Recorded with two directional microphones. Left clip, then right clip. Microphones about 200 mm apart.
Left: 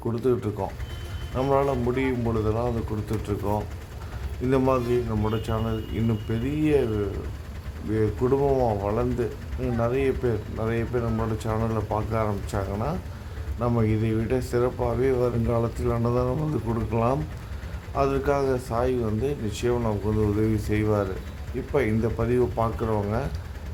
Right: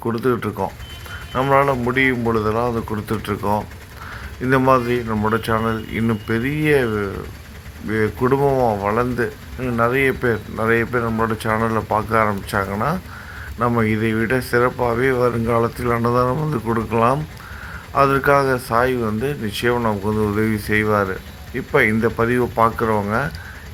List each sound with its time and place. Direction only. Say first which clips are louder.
0.2 s speech: right 3 dB; centre (ahead or behind)
2.6 s speech: right 7 dB; 15° right (ahead or behind)
4.4 s speech: right 7 dB; 5° right (ahead or behind)
5.0 s speech: right 9 dB; 15° right (ahead or behind)
8.2 s speech: right 6 dB; 15° right (ahead or behind)
8.8 s speech: right 7 dB; 5° right (ahead or behind)
16.2 s speech: right 7 dB; 15° right (ahead or behind)
16.9 s speech: right 7 dB; 5° right (ahead or behind)
19.7 s speech: right 6 dB; 15° right (ahead or behind)
20.4 s speech: right 7 dB; centre (ahead or behind)
20.8 s speech: right 6 dB; 20° right (ahead or behind)
21.7 s speech: right 9 dB; 5° right (ahead or behind)